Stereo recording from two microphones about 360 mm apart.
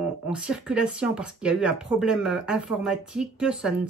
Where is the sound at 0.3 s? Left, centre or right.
Centre.